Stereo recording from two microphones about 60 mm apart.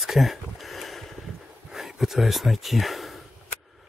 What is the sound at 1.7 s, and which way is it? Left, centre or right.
Speech, centre.